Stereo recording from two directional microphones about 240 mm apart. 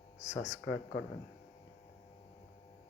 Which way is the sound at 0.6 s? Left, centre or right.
Left.